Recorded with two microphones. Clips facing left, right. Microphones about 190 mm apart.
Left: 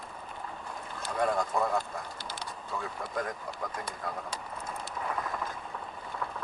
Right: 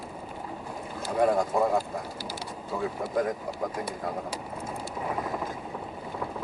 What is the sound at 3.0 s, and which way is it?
Vehicle, 10° right (ahead or behind).